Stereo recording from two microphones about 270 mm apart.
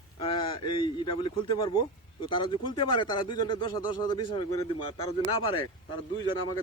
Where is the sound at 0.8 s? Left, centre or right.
Centre.